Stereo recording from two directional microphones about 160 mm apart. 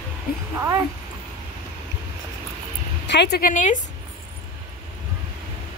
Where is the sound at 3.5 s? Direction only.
50° left (ahead or behind).